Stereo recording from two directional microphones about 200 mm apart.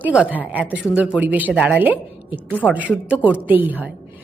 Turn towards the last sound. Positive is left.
turn(degrees=-10)  # may be behind; listen again after turning